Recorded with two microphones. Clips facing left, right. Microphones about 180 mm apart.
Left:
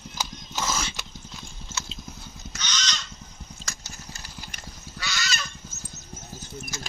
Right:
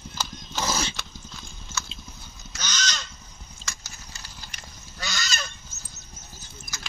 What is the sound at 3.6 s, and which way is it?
Horse, 45° left (ahead or behind).